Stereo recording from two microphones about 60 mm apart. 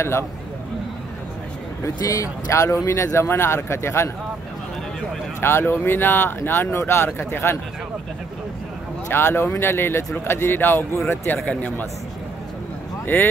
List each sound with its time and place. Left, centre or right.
2.0 s speech: left
2.5 s speech: left
5.4 s speech: left
9.1 s speech: left
13.0 s speech: left